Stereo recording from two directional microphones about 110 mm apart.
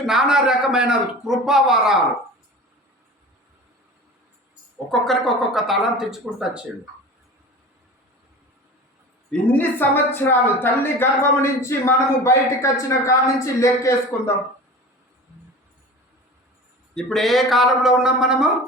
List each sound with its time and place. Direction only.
0.0 s a man's voice: 5° right (ahead or behind)
4.9 s a man's voice: centre (ahead or behind)
9.5 s a woman's voice: 15° left (ahead or behind)
16.9 s a man's voice: 5° left (ahead or behind)